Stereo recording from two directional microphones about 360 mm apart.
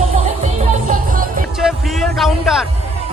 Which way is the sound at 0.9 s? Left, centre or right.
Right.